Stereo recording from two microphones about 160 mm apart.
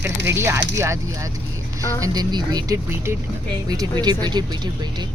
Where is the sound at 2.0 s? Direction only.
25° right (ahead or behind).